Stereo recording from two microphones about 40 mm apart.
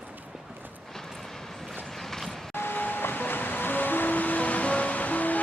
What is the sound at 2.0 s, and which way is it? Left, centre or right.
Vehicle, centre.